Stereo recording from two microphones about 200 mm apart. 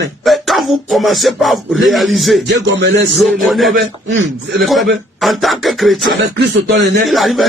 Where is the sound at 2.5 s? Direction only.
60° right (ahead or behind).